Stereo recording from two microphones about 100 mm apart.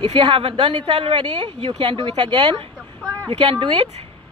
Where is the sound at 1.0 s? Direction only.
75° right (ahead or behind).